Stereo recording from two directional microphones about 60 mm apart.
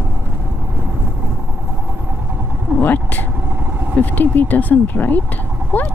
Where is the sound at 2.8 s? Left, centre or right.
Left.